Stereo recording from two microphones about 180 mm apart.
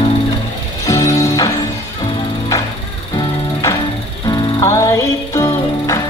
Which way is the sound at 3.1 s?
15° left (ahead or behind).